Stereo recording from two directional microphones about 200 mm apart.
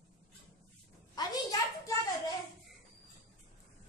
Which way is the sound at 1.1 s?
15° left (ahead or behind).